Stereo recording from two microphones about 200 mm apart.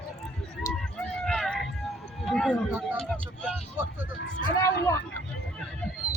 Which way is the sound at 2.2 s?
Centre (ahead or behind).